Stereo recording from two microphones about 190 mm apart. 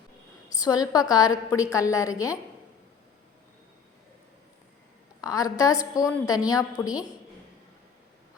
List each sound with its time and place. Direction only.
0.6 s a woman's voice: 20° left (ahead or behind)
5.2 s a woman's voice: 15° left (ahead or behind)